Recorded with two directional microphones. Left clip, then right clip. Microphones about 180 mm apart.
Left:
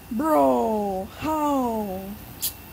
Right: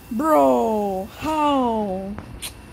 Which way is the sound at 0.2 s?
15° right (ahead or behind).